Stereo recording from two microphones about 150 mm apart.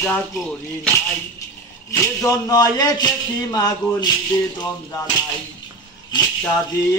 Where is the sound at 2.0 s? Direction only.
20° left (ahead or behind).